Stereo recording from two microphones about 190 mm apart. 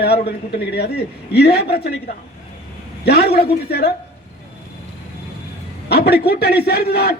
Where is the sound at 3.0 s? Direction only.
55° left (ahead or behind).